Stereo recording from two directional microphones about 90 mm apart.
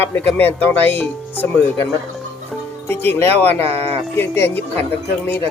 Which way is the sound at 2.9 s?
25° left (ahead or behind).